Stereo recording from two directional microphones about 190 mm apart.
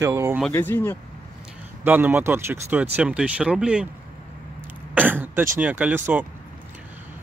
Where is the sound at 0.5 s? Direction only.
10° left (ahead or behind).